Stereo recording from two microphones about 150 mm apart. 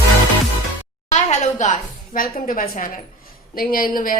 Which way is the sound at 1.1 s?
50° left (ahead or behind).